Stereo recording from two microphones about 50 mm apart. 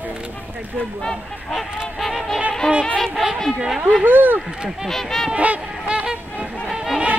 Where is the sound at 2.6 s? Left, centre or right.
Left.